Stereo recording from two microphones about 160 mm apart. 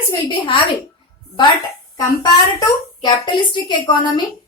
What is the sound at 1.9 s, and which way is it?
A woman's voice, 25° left (ahead or behind).